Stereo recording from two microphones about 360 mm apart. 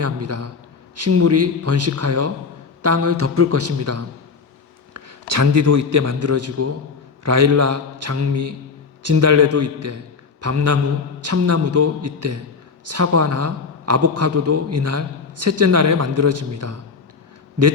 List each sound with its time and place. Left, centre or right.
0.0 s a man's voice: right